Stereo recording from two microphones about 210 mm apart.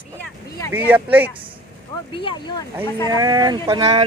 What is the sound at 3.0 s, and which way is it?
Speech, 20° right (ahead or behind).